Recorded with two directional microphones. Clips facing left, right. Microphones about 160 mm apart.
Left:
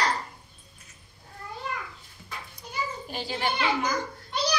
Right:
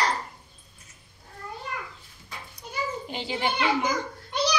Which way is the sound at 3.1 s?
20° right (ahead or behind).